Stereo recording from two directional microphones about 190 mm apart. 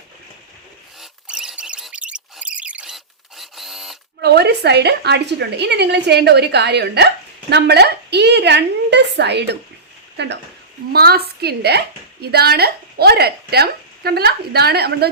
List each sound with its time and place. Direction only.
1.3 s a sound: 5° right (ahead or behind)
4.2 s a woman's voice: 60° right (ahead or behind)
10.9 s a woman's voice: 55° right (ahead or behind)